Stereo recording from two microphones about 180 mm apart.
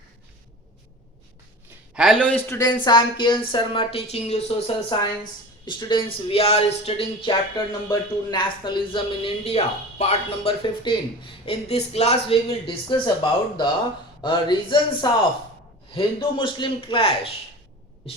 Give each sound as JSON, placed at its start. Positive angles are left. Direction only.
{"t": 2.0, "sound": "speech", "side_deg": 0}
{"t": 14.2, "sound": "speech", "side_deg": 25}